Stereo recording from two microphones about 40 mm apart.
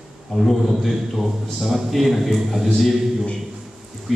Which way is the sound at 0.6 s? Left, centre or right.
Centre.